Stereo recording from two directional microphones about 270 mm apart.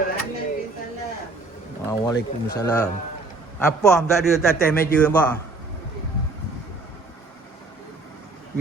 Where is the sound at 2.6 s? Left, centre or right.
Centre.